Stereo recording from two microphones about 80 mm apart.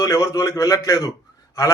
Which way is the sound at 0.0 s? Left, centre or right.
Left.